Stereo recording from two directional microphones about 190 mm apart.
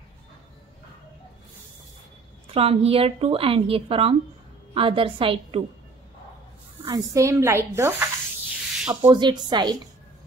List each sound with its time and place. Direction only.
2.5 s a woman's voice: 30° right (ahead or behind)
6.8 s speech: 15° right (ahead or behind)
9.1 s a woman's voice: 25° right (ahead or behind)